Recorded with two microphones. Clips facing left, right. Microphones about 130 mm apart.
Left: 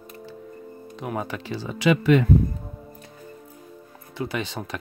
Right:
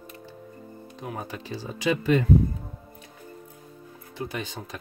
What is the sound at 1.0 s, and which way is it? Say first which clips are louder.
Speech: left 5 dB; 80° left.